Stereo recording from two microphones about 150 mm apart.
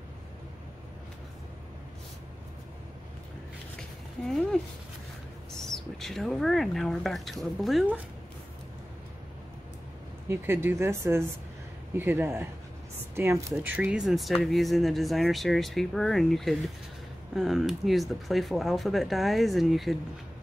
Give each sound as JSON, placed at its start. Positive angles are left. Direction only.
{"t": 4.3, "sound": "speech", "side_deg": 5}
{"t": 10.2, "sound": "speech", "side_deg": -15}